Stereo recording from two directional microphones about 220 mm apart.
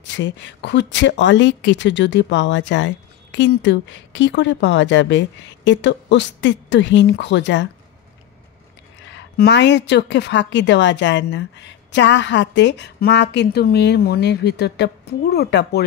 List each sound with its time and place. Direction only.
0.0 s speech: 55° left (ahead or behind)
9.1 s a woman's voice: 50° left (ahead or behind)